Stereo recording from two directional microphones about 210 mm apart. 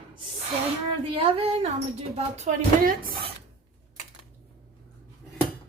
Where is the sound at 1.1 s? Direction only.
25° right (ahead or behind).